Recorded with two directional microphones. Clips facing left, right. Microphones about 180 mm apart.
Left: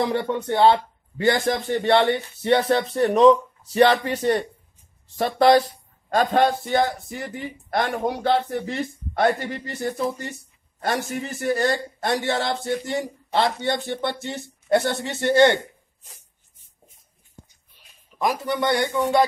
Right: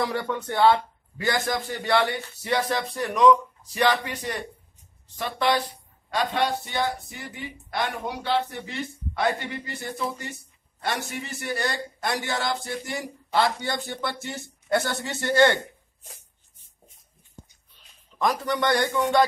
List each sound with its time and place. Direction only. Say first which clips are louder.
0.0 s a man's voice: left 4 dB; 25° left (ahead or behind)
18.1 s a man's voice: left 1 dB; 10° left (ahead or behind)
18.6 s a man's voice: left 1 dB; 25° left (ahead or behind)